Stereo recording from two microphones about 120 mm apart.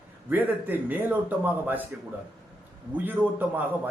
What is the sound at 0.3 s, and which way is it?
Speech, 15° right (ahead or behind).